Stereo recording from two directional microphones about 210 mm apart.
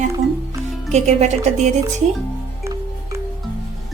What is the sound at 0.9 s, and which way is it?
Speech, 30° right (ahead or behind).